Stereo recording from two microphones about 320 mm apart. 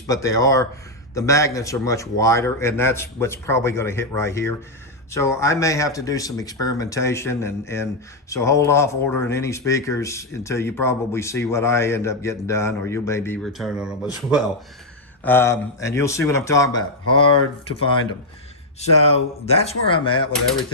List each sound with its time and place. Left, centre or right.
0.1 s speech: centre
18.8 s speech: centre